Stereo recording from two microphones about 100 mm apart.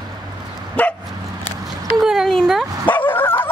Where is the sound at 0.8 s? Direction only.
15° left (ahead or behind).